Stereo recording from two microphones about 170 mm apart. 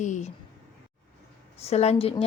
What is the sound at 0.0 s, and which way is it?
Speech, 45° left (ahead or behind).